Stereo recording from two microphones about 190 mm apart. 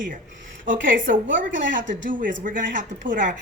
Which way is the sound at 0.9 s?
45° right (ahead or behind).